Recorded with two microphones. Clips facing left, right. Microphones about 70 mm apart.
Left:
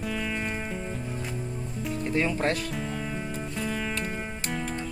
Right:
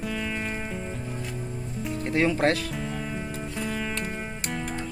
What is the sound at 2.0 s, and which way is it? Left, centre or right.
Speech, right.